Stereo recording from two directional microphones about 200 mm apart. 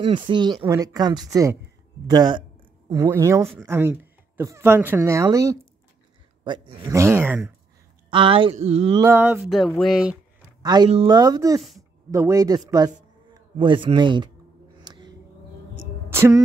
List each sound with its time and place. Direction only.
0.0 s speech: 25° right (ahead or behind)
8.1 s speech: 25° right (ahead or behind)
9.0 s a sound: 10° right (ahead or behind)
10.6 s speech: 20° right (ahead or behind)
14.8 s a sound: 20° right (ahead or behind)
16.1 s speech: 15° right (ahead or behind)